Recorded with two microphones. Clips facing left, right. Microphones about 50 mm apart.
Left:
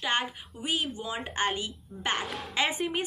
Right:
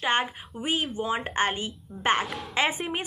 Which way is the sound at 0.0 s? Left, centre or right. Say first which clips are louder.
Right 4 dB; right.